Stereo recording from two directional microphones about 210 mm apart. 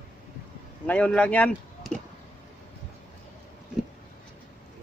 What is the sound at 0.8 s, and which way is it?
Speech, 5° left (ahead or behind).